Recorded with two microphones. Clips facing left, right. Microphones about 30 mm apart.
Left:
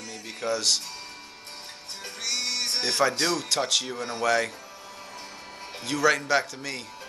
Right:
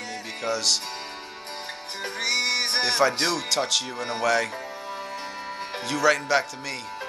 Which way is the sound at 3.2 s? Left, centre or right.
Right.